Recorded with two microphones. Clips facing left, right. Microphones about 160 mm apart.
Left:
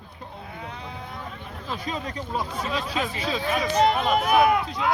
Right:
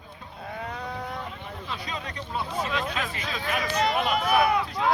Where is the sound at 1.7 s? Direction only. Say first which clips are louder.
Left 6 dB; 45° left (ahead or behind); by 3.8 s 30° left (ahead or behind).